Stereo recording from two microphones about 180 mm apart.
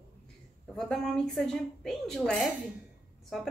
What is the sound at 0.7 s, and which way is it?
A woman's voice, 5° left (ahead or behind).